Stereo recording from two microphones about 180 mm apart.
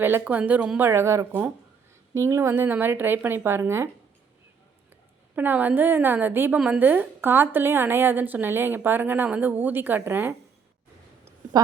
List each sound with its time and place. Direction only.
0.0 s a woman's voice: 10° right (ahead or behind)
5.3 s a woman's voice: 10° right (ahead or behind)
11.5 s a sound: 20° right (ahead or behind)